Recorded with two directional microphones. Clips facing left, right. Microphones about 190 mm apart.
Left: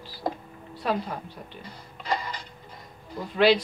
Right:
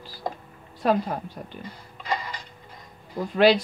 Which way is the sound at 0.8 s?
45° right (ahead or behind).